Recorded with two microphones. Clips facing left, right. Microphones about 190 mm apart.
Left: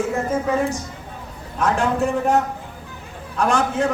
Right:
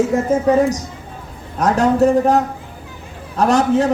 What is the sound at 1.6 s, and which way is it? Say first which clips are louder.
Speech: right 6 dB; 40° right (ahead or behind).